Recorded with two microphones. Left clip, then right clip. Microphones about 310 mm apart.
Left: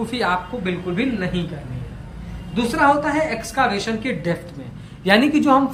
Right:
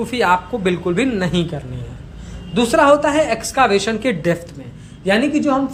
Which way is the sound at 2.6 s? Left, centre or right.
Centre.